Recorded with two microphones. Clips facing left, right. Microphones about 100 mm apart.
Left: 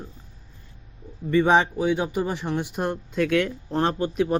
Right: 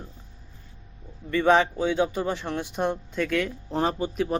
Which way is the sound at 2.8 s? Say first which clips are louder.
Even; centre (ahead or behind).